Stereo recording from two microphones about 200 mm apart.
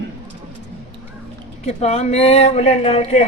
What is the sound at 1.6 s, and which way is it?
Speech, 35° left (ahead or behind).